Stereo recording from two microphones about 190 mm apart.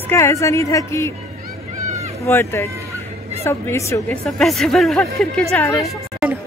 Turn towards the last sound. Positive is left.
turn(degrees=0)  # may be behind; listen again after turning